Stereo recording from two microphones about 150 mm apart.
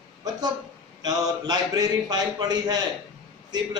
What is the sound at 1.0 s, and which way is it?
A man's voice, 25° right (ahead or behind).